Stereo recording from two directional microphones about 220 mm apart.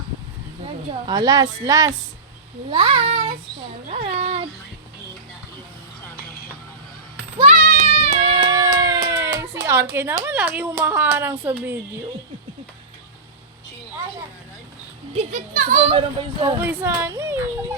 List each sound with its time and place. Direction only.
0.6 s a woman's voice: 20° right (ahead or behind)
7.3 s music: 35° right (ahead or behind); by 9.3 s 15° right (ahead or behind)
9.4 s a sound: 15° right (ahead or behind)
9.9 s speech: 10° right (ahead or behind)
15.1 s speech: 30° right (ahead or behind)
16.0 s a child's voice: 20° right (ahead or behind)
16.6 s speech: 10° right (ahead or behind)